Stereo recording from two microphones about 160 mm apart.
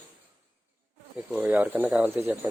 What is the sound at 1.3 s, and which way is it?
Speech, 10° right (ahead or behind).